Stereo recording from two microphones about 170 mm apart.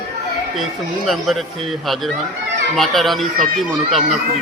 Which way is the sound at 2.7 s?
Centre (ahead or behind).